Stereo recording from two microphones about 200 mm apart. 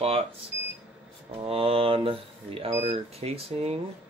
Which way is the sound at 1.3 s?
30° right (ahead or behind).